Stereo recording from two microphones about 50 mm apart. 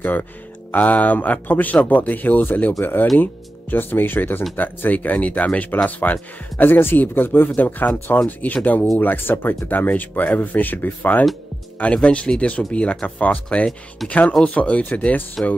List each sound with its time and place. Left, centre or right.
0.0 s speech: left
6.6 s speech: left
7.5 s speech: left
12.0 s speech: left
15.4 s speech: centre